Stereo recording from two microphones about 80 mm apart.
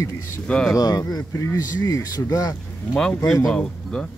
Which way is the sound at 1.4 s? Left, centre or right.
Left.